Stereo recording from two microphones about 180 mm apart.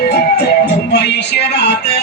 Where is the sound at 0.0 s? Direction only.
65° left (ahead or behind).